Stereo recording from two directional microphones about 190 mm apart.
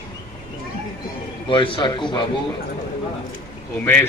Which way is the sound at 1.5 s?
25° left (ahead or behind).